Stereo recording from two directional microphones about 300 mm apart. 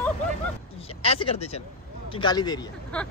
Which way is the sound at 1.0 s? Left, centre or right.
Centre.